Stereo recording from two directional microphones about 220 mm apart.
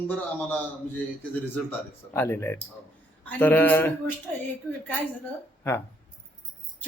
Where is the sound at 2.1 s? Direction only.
10° left (ahead or behind).